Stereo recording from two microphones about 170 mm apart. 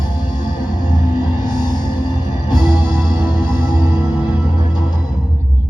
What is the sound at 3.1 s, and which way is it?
Music, 25° left (ahead or behind).